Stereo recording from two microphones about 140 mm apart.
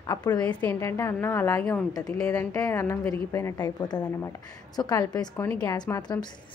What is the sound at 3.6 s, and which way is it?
A woman's voice, 30° left (ahead or behind).